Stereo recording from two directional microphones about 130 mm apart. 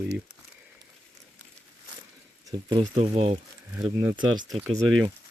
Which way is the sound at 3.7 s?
35° right (ahead or behind).